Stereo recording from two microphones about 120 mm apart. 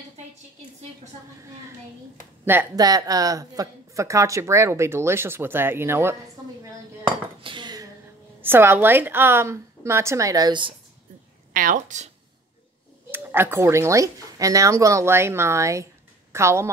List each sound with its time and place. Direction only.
2.4 s speech: 15° right (ahead or behind)
2.7 s speech: 30° right (ahead or behind)
7.4 s dishes: 40° right (ahead or behind)
8.4 s speech: 20° right (ahead or behind); by 10.7 s 35° right (ahead or behind)
11.7 s speech: 90° right
13.1 s speech: 20° right (ahead or behind)